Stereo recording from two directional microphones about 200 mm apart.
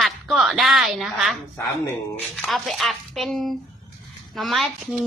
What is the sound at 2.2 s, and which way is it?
A woman's voice, centre (ahead or behind).